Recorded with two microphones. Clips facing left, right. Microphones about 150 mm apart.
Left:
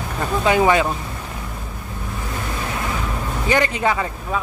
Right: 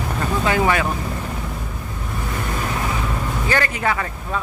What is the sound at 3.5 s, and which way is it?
Speech, 20° left (ahead or behind).